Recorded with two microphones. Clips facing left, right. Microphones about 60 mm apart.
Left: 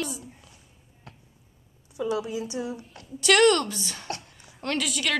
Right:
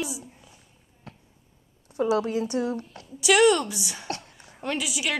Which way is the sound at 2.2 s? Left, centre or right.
Right.